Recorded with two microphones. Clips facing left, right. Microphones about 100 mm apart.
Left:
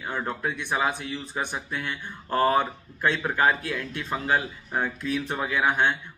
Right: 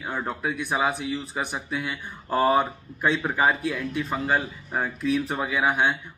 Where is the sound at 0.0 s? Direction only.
5° right (ahead or behind).